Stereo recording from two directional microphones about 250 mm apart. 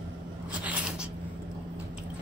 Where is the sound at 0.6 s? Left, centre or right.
Centre.